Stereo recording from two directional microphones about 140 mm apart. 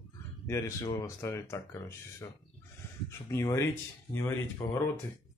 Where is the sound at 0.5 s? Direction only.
20° left (ahead or behind).